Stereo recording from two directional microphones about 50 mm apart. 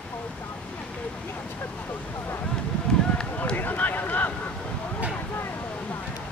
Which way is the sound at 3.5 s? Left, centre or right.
Left.